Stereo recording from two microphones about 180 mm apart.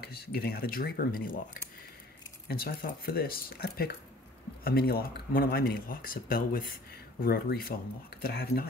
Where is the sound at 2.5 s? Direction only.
55° left (ahead or behind).